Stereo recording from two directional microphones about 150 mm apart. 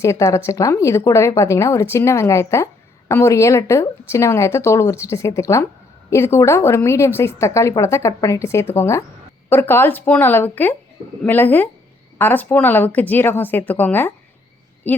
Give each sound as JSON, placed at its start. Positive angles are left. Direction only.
{"t": 0.0, "sound": "a woman's voice", "side_deg": 20}